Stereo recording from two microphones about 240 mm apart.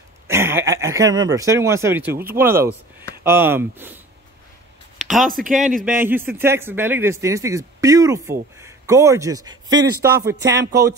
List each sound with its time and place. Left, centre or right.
0.3 s speech: centre
5.2 s speech: right
5.9 s speech: centre
9.7 s speech: right